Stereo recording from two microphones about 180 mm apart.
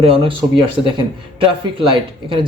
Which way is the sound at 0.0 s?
30° right (ahead or behind).